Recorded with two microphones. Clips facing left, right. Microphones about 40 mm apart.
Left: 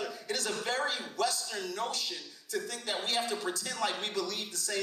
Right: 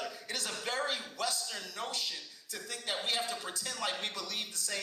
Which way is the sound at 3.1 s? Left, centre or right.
Left.